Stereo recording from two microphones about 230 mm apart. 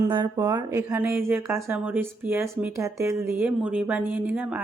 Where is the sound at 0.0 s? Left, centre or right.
Centre.